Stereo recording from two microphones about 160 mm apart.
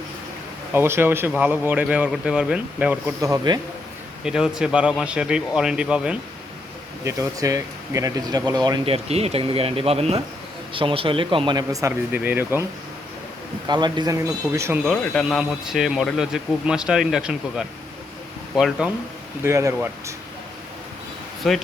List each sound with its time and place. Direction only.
0.7 s speech: 15° right (ahead or behind)
3.2 s speech: 20° right (ahead or behind)
4.2 s speech: 5° right (ahead or behind)
7.0 s speech: 20° right (ahead or behind)
13.7 s speech: 25° right (ahead or behind)
14.8 s speech: centre (ahead or behind)
19.4 s speech: 15° right (ahead or behind)
21.5 s speech: centre (ahead or behind)